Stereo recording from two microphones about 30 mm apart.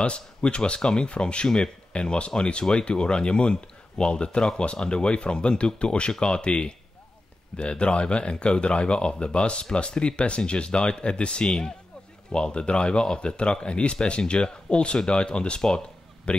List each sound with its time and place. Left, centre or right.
0.0 s speech: left